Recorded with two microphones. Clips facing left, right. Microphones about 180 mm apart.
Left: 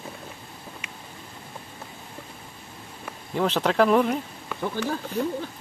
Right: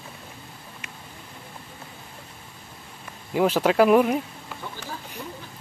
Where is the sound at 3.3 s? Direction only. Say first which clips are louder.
Right 3 dB; 10° right (ahead or behind).